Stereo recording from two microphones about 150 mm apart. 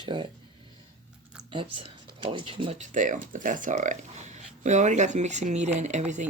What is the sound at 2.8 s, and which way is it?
Speech, 60° right (ahead or behind).